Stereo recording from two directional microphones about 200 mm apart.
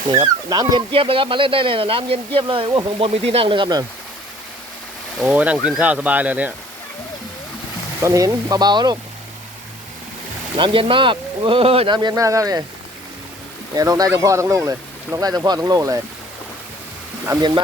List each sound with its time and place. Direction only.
0.1 s speech: 20° right (ahead or behind)
5.2 s speech: 5° right (ahead or behind)
8.0 s speech: 15° right (ahead or behind)
10.6 s speech: 25° right (ahead or behind)
13.7 s speech: 20° right (ahead or behind)
17.2 s speech: 20° right (ahead or behind)